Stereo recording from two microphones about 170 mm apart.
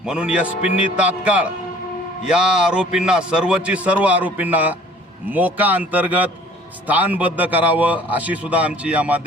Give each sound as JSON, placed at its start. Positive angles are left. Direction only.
{"t": 0.1, "sound": "a man's voice", "side_deg": -5}